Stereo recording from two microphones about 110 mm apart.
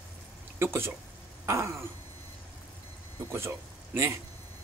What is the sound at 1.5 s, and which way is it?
Speech, 25° right (ahead or behind).